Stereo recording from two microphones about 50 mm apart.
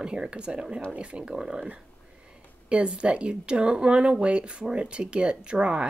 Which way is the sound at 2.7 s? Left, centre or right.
Centre.